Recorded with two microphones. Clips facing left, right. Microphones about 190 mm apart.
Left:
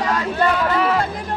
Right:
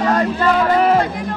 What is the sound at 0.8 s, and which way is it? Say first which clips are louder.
Music: right 5 dB; 45° right (ahead or behind).